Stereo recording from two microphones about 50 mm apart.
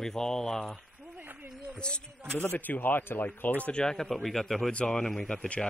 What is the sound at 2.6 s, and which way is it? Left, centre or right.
Speech, left.